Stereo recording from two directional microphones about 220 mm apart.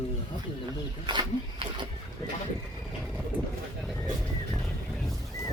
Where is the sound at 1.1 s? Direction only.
20° right (ahead or behind).